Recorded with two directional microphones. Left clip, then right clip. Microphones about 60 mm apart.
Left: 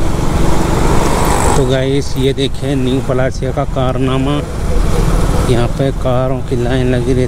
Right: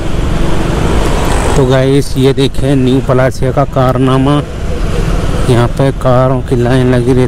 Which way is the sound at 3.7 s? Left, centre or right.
Right.